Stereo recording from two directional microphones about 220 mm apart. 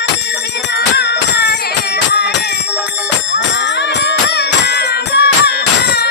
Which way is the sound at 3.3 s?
50° left (ahead or behind).